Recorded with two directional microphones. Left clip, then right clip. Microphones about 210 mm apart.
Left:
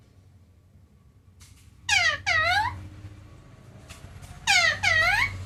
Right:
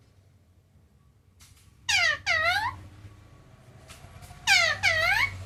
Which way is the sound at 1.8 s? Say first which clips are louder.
Left 2 dB; 15° right (ahead or behind).